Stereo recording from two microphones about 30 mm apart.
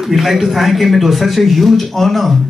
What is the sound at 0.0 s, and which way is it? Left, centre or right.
Speech, centre.